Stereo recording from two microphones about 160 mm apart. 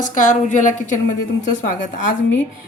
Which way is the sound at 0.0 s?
50° left (ahead or behind).